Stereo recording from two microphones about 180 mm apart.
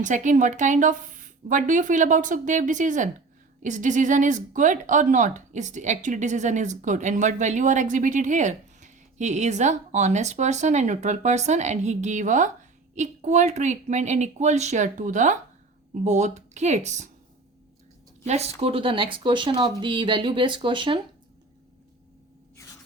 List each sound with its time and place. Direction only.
0.0 s speech: 45° right (ahead or behind)
18.3 s speech: 35° right (ahead or behind)